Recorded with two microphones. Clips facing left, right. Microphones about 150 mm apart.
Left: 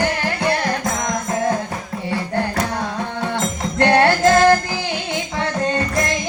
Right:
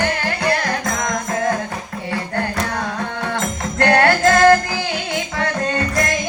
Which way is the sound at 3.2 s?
25° left (ahead or behind).